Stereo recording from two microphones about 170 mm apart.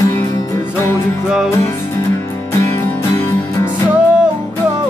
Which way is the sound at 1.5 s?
15° left (ahead or behind).